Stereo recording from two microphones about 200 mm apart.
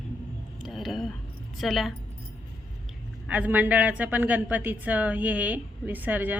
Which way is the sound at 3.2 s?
5° right (ahead or behind).